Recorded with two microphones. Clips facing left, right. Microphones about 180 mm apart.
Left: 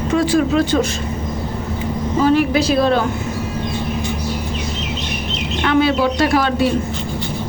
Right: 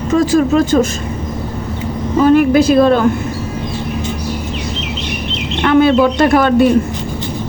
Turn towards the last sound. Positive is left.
turn(degrees=-55)  # may be behind; listen again after turning